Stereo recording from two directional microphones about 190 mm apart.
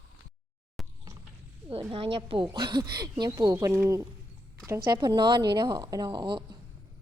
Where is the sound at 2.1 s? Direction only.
25° right (ahead or behind).